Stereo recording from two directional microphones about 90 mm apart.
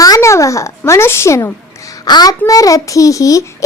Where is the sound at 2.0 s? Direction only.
50° left (ahead or behind).